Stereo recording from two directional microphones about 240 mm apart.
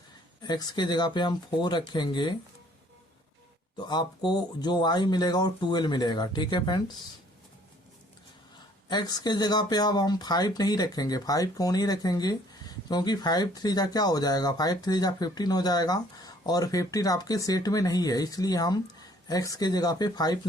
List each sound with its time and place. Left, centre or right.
0.4 s speech: centre
3.8 s speech: centre
8.9 s speech: centre